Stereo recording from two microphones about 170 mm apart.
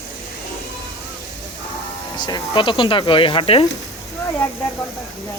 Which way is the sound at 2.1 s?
25° left (ahead or behind).